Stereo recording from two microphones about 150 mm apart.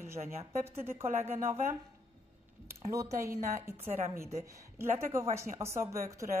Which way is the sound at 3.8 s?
45° right (ahead or behind).